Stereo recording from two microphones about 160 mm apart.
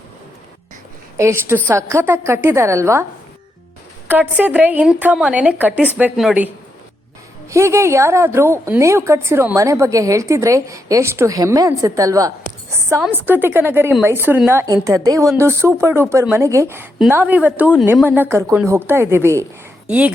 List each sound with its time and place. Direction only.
1.1 s a woman's voice: 15° right (ahead or behind)
4.1 s a woman's voice: 10° right (ahead or behind)
7.5 s a woman's voice: 15° right (ahead or behind)